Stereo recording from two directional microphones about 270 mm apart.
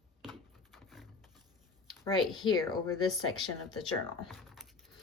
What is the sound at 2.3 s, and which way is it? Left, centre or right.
Speech, centre.